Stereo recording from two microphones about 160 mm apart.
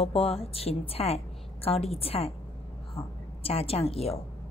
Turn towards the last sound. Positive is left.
turn(degrees=40)  # may be behind; listen again after turning